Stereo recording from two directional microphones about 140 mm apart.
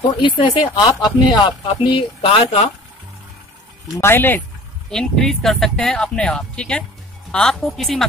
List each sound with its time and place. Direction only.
0.2 s speech: 35° left (ahead or behind)
4.0 s speech: 15° left (ahead or behind)
4.9 s speech: centre (ahead or behind)